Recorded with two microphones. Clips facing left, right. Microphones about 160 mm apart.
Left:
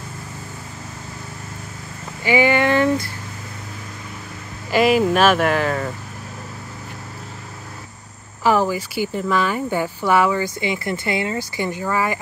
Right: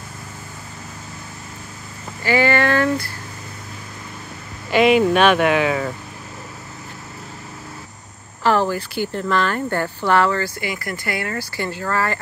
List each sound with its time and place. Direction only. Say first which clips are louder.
2.2 s speech: left 1 dB; 15° left (ahead or behind)
4.6 s speech: right 1 dB; centre (ahead or behind)
8.5 s speech: even; 10° left (ahead or behind)
10.6 s speech: left 4 dB; 25° left (ahead or behind)